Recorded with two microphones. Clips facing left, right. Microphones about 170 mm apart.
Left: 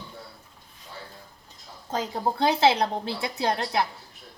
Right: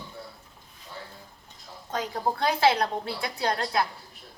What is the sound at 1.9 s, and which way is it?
A woman's voice, 25° left (ahead or behind).